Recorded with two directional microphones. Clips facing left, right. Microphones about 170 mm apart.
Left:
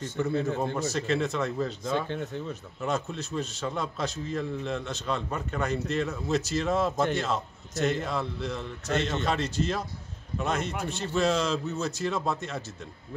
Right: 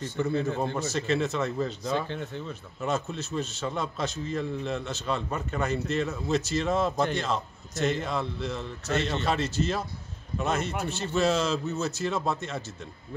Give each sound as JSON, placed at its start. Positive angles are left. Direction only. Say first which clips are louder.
{"t": 0.2, "sound": "a man's voice", "louder": "even", "side_deg": 0}
{"t": 2.0, "sound": "speech", "louder": "left 2 dB", "side_deg": 45}
{"t": 2.8, "sound": "a man's voice", "louder": "right 1 dB", "side_deg": 0}